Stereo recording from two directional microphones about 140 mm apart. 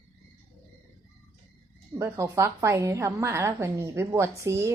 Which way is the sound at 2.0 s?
20° right (ahead or behind).